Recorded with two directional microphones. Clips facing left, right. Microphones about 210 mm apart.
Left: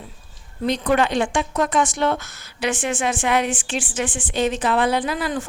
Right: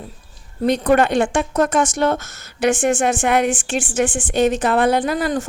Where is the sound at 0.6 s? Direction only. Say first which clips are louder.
Right 4 dB; 50° right (ahead or behind).